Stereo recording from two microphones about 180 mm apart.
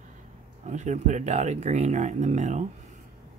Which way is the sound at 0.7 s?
40° right (ahead or behind).